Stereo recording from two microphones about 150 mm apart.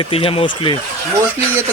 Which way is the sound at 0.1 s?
40° left (ahead or behind).